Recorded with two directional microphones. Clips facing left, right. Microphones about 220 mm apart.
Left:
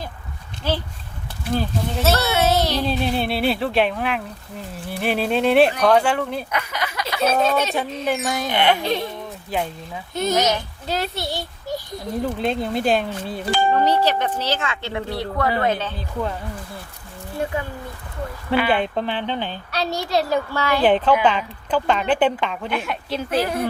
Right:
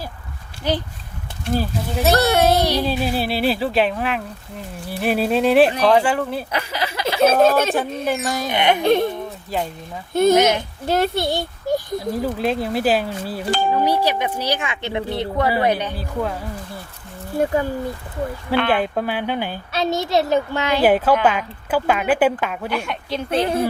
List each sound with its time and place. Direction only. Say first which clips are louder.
0.6 s speech: right 2 dB; 15° right (ahead or behind)
2.2 s speech: right 3 dB; 50° right (ahead or behind)
2.6 s speech: right 2 dB; 15° right (ahead or behind)
6.5 s speech: right 2 dB; 30° right (ahead or behind)
7.4 s speech: right 5 dB; 50° right (ahead or behind)
8.0 s speech: right 1 dB; centre (ahead or behind)
8.4 s speech: right 1 dB; 20° right (ahead or behind)
8.8 s speech: right 7 dB; 55° right (ahead or behind)
10.2 s a child's voice: right 6 dB; 55° right (ahead or behind)
11.9 s speech: right 2 dB; 5° right (ahead or behind)
18.7 s speech: right 1 dB; 5° right (ahead or behind)
20.8 s speech: right 1 dB; 5° right (ahead or behind)
23.3 s speech: right 3 dB; 25° right (ahead or behind)